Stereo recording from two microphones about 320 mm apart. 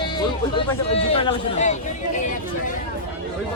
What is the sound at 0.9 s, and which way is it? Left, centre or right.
Speech, centre.